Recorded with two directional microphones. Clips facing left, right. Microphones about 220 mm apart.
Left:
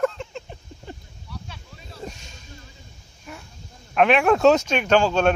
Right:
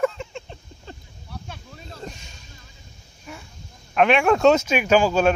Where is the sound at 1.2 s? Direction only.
55° right (ahead or behind).